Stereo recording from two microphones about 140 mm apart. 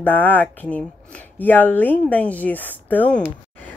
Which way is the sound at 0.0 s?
15° left (ahead or behind).